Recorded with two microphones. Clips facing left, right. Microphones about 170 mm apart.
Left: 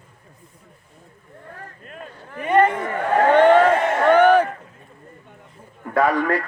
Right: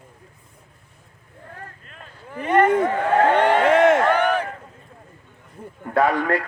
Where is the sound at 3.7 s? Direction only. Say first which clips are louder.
Right 4 dB; 90° right.